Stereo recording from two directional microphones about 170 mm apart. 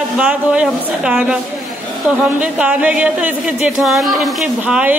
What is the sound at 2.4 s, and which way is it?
Speech, 5° right (ahead or behind).